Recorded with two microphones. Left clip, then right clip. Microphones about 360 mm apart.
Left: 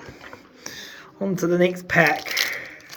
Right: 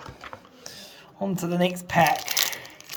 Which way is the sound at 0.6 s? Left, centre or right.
Centre.